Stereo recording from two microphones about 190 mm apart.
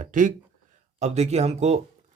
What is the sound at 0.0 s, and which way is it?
A man's voice, 40° right (ahead or behind).